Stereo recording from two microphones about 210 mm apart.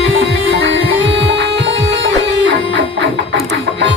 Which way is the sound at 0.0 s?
55° right (ahead or behind).